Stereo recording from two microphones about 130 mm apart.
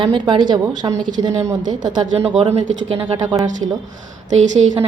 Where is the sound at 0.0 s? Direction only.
40° right (ahead or behind).